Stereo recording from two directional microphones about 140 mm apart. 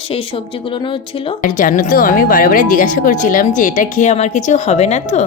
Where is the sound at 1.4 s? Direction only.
70° left (ahead or behind).